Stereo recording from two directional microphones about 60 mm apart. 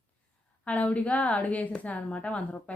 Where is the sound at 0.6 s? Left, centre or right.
Left.